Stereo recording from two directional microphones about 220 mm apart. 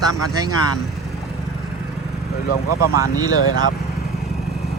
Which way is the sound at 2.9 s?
15° right (ahead or behind).